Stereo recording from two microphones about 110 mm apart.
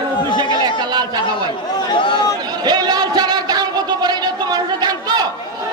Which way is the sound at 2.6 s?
40° right (ahead or behind).